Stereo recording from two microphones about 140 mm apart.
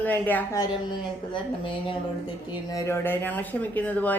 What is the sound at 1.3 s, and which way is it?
Speech, 35° left (ahead or behind).